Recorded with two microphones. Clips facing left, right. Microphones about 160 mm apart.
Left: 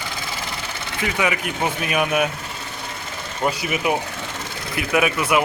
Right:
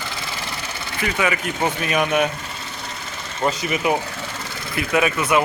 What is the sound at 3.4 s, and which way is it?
Speech, 5° left (ahead or behind).